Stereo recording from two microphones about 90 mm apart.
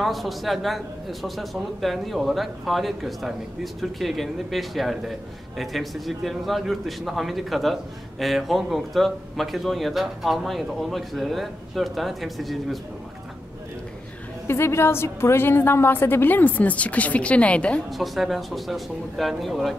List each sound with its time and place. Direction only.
0.0 s speech: centre (ahead or behind)
14.5 s a woman's voice: 30° left (ahead or behind); by 17.8 s 15° left (ahead or behind)
17.8 s speech: centre (ahead or behind)